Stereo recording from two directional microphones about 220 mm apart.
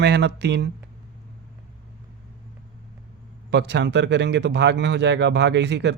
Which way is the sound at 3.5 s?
50° right (ahead or behind).